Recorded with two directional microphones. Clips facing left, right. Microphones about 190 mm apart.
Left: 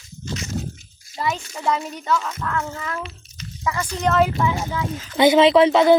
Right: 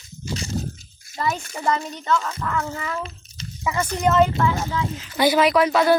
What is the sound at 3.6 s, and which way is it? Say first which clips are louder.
Speech: right 1 dB; 20° right (ahead or behind).